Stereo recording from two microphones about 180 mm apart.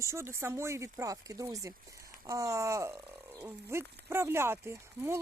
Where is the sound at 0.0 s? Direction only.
15° right (ahead or behind).